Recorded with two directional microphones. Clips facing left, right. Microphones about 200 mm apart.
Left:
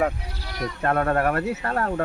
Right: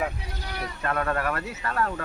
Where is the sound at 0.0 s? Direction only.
45° left (ahead or behind).